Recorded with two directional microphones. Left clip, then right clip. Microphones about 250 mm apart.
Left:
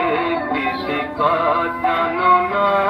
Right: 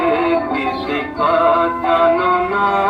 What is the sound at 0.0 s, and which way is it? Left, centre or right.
Music, right.